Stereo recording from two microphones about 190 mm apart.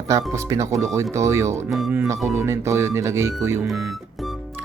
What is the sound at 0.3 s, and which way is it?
Speech, 15° right (ahead or behind).